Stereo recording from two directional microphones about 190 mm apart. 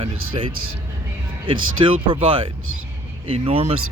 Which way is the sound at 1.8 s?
30° right (ahead or behind).